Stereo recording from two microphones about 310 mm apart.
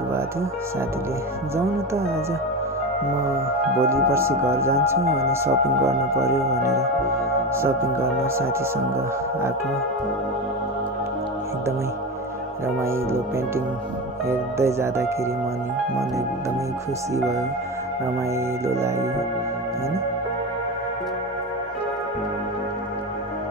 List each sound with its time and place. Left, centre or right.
3.8 s speech: centre
5.0 s speech: right
5.3 s speech: centre
12.6 s speech: centre
14.2 s speech: centre
17.1 s speech: centre
18.7 s speech: centre